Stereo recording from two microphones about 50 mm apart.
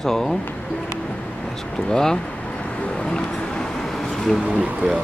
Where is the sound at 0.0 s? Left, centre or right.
Centre.